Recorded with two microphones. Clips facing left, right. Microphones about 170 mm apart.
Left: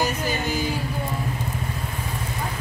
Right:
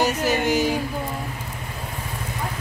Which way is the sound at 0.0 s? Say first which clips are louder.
Right 4 dB; 75° right (ahead or behind).